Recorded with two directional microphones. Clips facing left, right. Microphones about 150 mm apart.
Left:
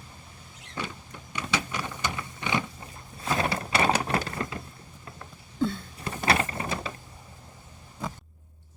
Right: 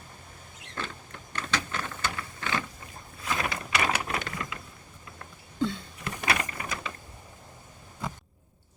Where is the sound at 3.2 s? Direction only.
30° left (ahead or behind).